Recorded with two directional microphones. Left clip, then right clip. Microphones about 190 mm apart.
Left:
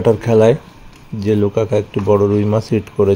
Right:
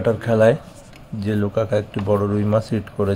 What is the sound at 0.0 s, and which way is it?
Speech, 25° left (ahead or behind).